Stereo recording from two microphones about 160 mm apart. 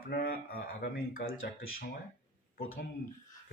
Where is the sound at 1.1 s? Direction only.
60° left (ahead or behind).